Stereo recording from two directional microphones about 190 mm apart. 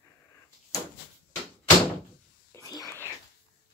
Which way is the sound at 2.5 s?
20° left (ahead or behind).